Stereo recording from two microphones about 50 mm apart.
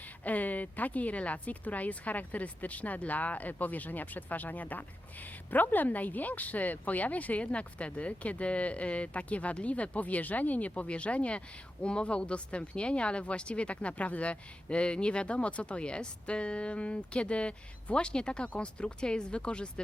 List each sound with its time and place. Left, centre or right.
0.3 s speech: left